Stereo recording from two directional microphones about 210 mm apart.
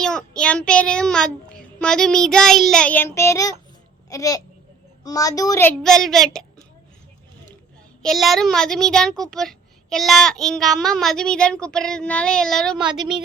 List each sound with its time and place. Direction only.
0.0 s a woman's voice: 5° left (ahead or behind)
8.0 s a woman's voice: centre (ahead or behind)